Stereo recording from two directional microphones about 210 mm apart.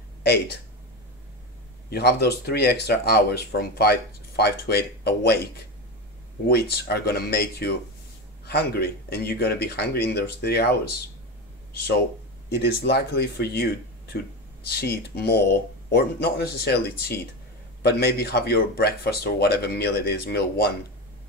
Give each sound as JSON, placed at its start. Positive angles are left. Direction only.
{"t": 0.2, "sound": "speech", "side_deg": 50}
{"t": 1.9, "sound": "speech", "side_deg": 50}
{"t": 6.5, "sound": "speech", "side_deg": 50}
{"t": 12.4, "sound": "speech", "side_deg": 50}
{"t": 17.8, "sound": "speech", "side_deg": 50}